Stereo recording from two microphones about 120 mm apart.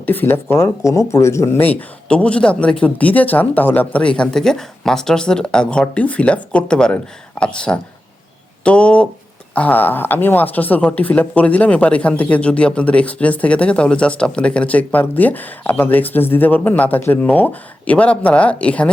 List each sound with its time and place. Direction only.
0.0 s speech: 15° left (ahead or behind)
1.6 s speech: 10° left (ahead or behind)